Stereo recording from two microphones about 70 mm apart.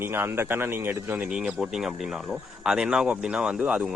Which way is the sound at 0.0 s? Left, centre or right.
Right.